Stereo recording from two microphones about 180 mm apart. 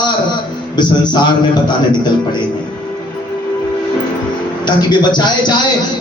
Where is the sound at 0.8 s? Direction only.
25° left (ahead or behind).